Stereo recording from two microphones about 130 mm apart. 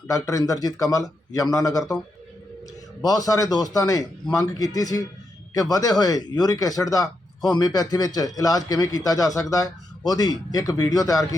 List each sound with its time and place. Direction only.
0.1 s speech: 25° left (ahead or behind)
3.0 s speech: 30° left (ahead or behind)